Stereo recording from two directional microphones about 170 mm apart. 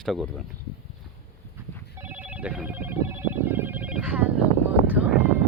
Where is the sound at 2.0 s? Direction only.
10° right (ahead or behind).